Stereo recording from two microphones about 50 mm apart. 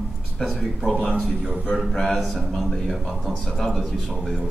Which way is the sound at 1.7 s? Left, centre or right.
Centre.